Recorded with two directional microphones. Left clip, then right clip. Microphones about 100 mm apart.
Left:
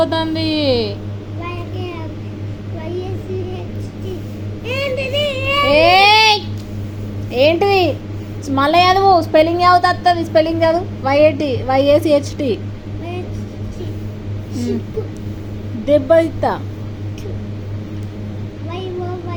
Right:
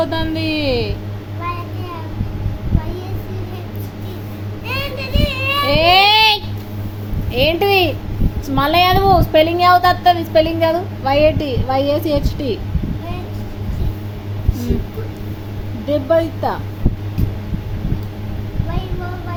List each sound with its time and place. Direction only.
0.0 s a child's voice: 5° left (ahead or behind)
4.6 s child singing: 45° right (ahead or behind)
5.6 s child singing: 5° left (ahead or behind)
7.3 s a child's voice: centre (ahead or behind)
15.9 s speech: 10° left (ahead or behind)